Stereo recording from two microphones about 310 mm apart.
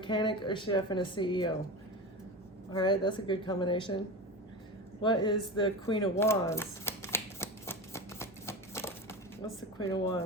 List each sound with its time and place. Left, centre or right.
0.0 s a woman's voice: centre
2.7 s a woman's voice: centre
5.0 s a sound: centre